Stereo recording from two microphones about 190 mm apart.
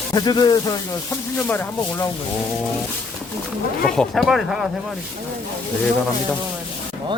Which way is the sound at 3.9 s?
Centre (ahead or behind).